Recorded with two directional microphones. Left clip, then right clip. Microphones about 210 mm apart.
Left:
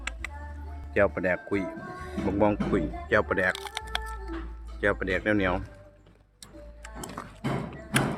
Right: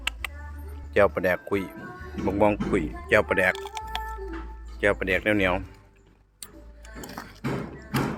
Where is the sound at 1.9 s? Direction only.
55° left (ahead or behind).